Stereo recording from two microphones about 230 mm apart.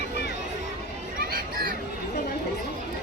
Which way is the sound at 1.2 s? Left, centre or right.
Right.